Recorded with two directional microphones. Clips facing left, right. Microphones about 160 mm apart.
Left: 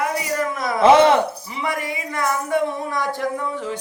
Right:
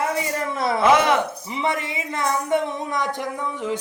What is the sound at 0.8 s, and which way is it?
Speech, 30° left (ahead or behind).